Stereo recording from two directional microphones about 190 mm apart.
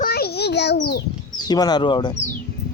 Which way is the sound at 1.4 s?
20° left (ahead or behind).